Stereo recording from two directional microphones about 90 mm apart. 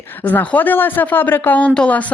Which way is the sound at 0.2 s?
20° left (ahead or behind).